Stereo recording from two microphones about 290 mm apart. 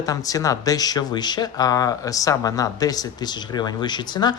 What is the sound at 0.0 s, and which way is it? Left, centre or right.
Speech, centre.